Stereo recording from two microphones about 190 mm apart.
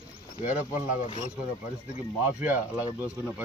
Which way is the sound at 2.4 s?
10° right (ahead or behind).